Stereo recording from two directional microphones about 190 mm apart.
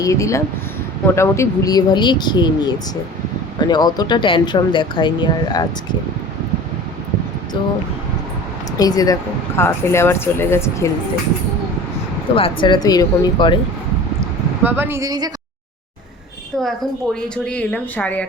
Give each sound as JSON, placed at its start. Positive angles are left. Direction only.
{"t": 0.0, "sound": "speech", "side_deg": 15}
{"t": 8.8, "sound": "speech", "side_deg": 20}
{"t": 12.4, "sound": "speech", "side_deg": 25}
{"t": 14.2, "sound": "vehicle", "side_deg": -10}
{"t": 17.2, "sound": "speech", "side_deg": 5}